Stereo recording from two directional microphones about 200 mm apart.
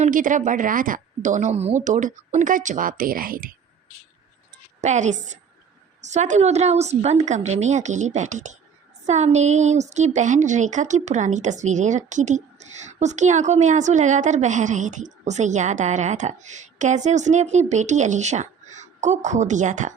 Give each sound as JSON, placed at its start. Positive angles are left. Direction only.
{"t": 0.0, "sound": "a woman's voice", "side_deg": -40}
{"t": 4.8, "sound": "a woman's voice", "side_deg": -35}